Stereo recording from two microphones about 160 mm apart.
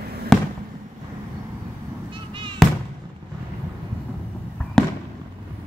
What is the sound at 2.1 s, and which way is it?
Cat, 30° right (ahead or behind).